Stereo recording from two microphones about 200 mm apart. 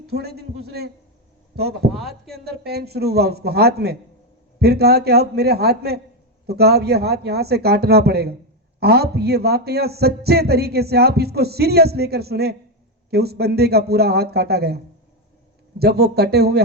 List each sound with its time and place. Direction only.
0.1 s a man's voice: 55° right (ahead or behind)
1.9 s speech: centre (ahead or behind)
2.3 s a man's voice: 55° right (ahead or behind)
15.8 s a man's voice: 55° right (ahead or behind)